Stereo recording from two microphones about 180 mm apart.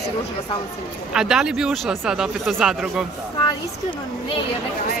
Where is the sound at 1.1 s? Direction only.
5° right (ahead or behind).